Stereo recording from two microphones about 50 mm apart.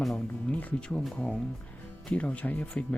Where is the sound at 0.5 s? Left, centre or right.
Left.